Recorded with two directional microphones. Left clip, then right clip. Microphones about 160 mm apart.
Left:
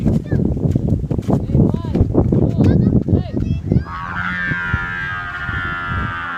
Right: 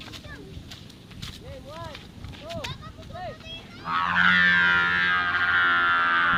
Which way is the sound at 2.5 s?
80° left.